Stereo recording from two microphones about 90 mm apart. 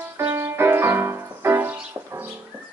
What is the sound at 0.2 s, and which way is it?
Music, 30° right (ahead or behind).